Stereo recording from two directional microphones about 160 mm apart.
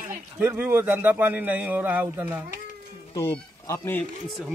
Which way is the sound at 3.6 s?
15° left (ahead or behind).